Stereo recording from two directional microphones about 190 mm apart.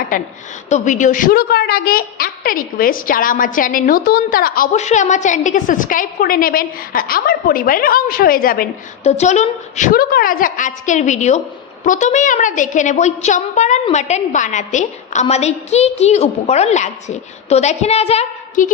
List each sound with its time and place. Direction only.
0.7 s a woman's voice: 40° left (ahead or behind)
9.0 s a woman's voice: 35° left (ahead or behind)